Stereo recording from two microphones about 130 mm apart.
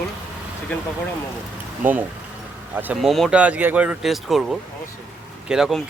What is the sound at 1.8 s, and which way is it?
Speech, 15° right (ahead or behind).